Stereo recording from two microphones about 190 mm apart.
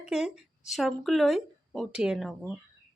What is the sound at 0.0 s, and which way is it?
Speech, 5° right (ahead or behind).